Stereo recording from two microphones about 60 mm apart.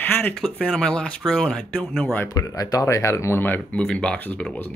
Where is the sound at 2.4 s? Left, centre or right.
Left.